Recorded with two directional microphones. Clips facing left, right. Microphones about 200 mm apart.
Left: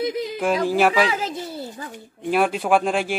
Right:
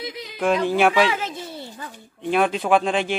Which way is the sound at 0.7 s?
5° left (ahead or behind).